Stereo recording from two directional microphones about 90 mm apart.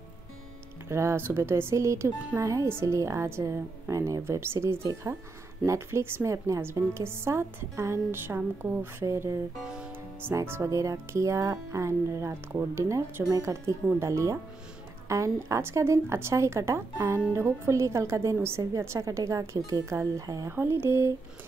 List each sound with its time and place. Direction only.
0.8 s speech: 30° right (ahead or behind)
9.6 s music: 10° right (ahead or behind)
10.4 s speech: 30° right (ahead or behind)
20.5 s a sound: 25° right (ahead or behind)